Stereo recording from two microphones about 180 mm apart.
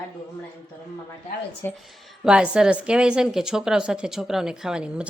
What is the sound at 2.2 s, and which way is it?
Speech, 5° right (ahead or behind).